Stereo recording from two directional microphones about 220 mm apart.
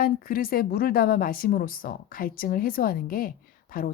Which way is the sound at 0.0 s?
40° left (ahead or behind).